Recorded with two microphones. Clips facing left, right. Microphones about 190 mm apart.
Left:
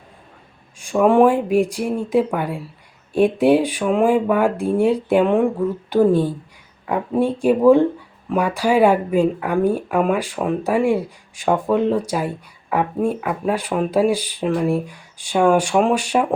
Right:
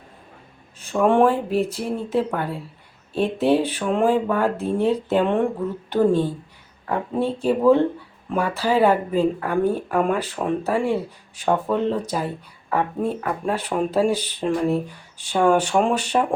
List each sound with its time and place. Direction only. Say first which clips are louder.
0.8 s speech: left 3 dB; 10° left (ahead or behind)